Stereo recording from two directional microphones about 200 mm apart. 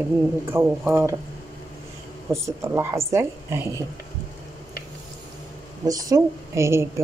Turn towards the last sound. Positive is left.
turn(degrees=-15)  # may be behind; listen again after turning